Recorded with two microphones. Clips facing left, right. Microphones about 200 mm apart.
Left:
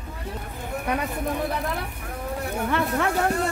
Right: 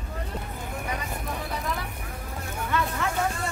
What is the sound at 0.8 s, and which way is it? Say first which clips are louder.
Speech: left 9 dB; 60° left (ahead or behind).